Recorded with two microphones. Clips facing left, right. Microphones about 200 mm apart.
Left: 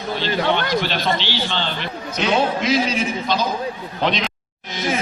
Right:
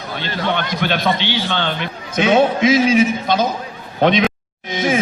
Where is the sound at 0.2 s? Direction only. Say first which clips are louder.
Left 1 dB; 55° right (ahead or behind).